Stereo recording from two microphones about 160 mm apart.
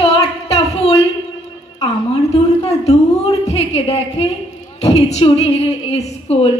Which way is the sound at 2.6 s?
40° left (ahead or behind).